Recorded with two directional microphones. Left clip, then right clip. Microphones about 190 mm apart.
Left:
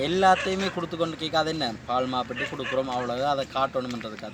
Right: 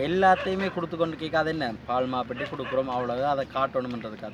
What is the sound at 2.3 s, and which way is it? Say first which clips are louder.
Speech: left 2 dB; 35° right (ahead or behind).